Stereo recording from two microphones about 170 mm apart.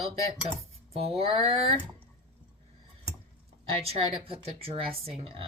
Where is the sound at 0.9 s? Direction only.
35° right (ahead or behind).